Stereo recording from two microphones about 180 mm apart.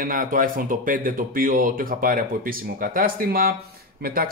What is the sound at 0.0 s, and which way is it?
A man's voice, 50° right (ahead or behind).